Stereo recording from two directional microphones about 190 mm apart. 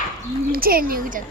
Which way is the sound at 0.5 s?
50° right (ahead or behind).